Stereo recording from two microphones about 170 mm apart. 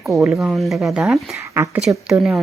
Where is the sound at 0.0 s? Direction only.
Centre (ahead or behind).